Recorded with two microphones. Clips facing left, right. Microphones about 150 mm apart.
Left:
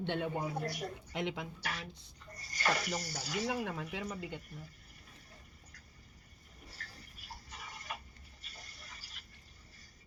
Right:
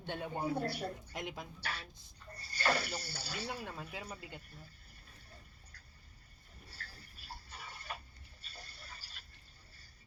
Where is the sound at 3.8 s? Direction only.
30° right (ahead or behind).